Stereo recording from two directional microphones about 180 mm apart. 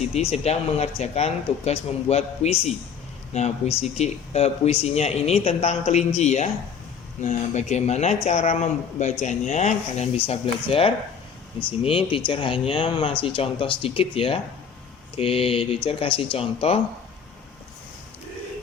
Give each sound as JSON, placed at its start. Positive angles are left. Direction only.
{"t": 0.0, "sound": "speech", "side_deg": 35}